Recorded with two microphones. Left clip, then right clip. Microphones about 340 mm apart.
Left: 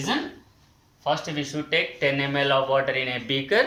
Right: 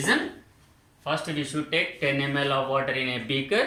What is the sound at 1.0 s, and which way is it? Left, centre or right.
Speech, centre.